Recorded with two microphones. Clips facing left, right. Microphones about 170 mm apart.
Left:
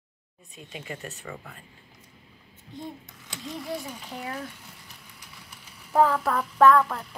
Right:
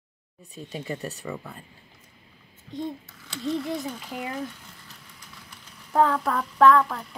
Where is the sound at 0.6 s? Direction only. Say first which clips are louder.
Right 5 dB; 40° right (ahead or behind).